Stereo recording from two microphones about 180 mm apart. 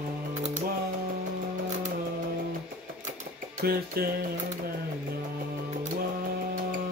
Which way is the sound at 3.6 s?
55° right (ahead or behind).